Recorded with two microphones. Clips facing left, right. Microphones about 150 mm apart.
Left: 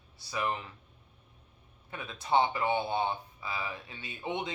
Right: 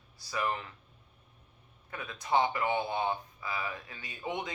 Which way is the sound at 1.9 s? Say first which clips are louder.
Left 1 dB; 25° left (ahead or behind).